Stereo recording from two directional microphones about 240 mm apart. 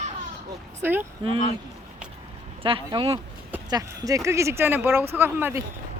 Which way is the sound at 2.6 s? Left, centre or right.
Centre.